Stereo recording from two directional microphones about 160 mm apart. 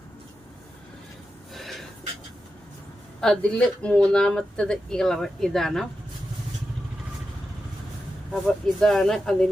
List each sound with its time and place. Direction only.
3.2 s speech: 5° left (ahead or behind)
8.3 s speech: 5° left (ahead or behind)